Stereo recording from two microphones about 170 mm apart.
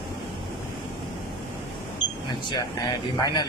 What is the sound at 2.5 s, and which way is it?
Speech, 25° left (ahead or behind).